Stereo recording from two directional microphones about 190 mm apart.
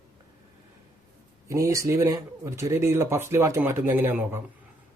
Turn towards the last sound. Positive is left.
turn(degrees=-10)  # may be behind; listen again after turning